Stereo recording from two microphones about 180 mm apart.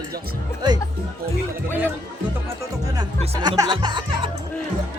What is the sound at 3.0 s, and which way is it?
Speech, 25° right (ahead or behind).